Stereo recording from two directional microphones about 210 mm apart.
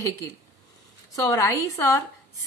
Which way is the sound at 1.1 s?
15° left (ahead or behind).